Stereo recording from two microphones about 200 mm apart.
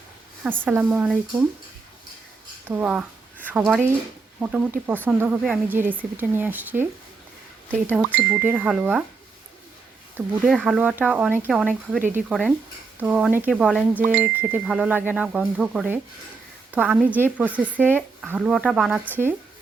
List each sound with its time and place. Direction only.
0.4 s speech: 10° right (ahead or behind)
2.6 s speech: 10° right (ahead or behind)
4.4 s speech: 5° right (ahead or behind)
7.9 s speech: 10° right (ahead or behind)
10.4 s speech: 5° right (ahead or behind)
11.9 s speech: 40° right (ahead or behind)
12.3 s speech: centre (ahead or behind)